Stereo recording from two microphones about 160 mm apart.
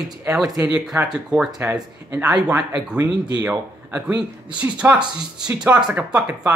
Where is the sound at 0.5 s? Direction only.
20° right (ahead or behind).